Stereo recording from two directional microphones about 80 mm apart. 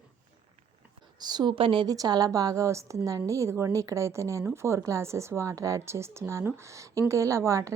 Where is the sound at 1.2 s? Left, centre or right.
Right.